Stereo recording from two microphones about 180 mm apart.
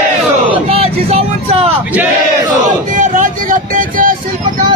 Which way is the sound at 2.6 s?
45° right (ahead or behind).